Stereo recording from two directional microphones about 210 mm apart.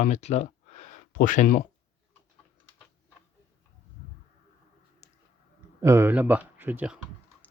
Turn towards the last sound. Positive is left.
turn(degrees=-10)  # may be behind; listen again after turning